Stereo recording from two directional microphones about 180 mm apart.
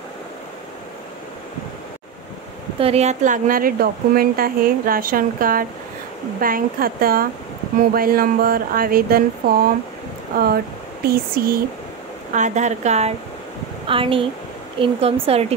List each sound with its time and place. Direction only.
2.8 s a woman's voice: 35° right (ahead or behind); by 11.6 s 55° right (ahead or behind)
12.3 s speech: 40° right (ahead or behind)